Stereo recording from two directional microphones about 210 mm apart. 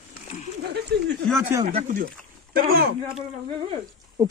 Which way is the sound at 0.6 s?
50° right (ahead or behind).